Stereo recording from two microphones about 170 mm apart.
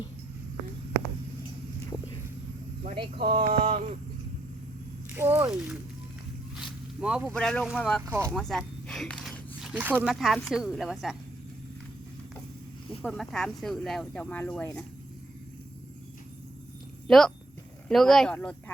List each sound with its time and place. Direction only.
2.8 s speech: 30° right (ahead or behind)
3.6 s a sound: 40° right (ahead or behind)
5.1 s speech: 10° right (ahead or behind)
7.0 s speech: 5° right (ahead or behind)
8.0 s speech: 15° right (ahead or behind)
8.4 s speech: 5° left (ahead or behind)
13.0 s speech: centre (ahead or behind)
17.1 s speech: centre (ahead or behind)